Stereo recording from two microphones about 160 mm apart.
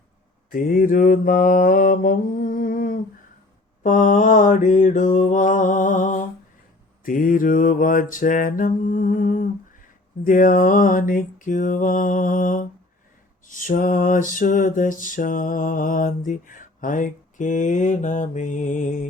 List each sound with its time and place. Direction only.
0.5 s music: 60° left (ahead or behind)
3.8 s mantra: 50° left (ahead or behind)
7.0 s music: 60° left (ahead or behind)